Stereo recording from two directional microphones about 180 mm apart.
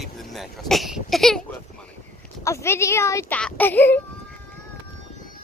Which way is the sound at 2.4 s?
15° left (ahead or behind).